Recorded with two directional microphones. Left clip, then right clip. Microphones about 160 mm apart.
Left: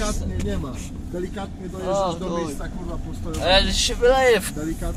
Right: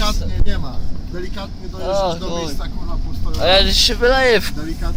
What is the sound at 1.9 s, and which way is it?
A man's voice, 60° right (ahead or behind).